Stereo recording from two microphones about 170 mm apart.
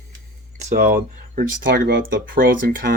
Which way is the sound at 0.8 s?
55° right (ahead or behind).